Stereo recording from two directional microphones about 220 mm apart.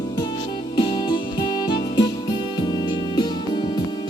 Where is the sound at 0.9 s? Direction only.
20° left (ahead or behind).